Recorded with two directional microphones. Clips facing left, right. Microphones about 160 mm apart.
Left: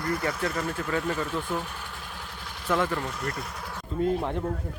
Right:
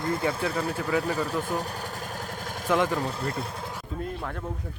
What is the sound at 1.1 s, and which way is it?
Speech, 35° right (ahead or behind).